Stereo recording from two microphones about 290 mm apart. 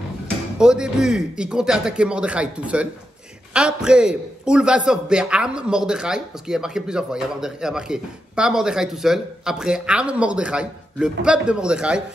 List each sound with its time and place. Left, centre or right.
0.6 s a man's voice: centre